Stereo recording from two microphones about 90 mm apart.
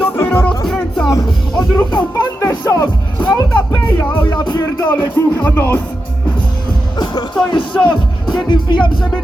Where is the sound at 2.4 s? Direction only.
35° left (ahead or behind).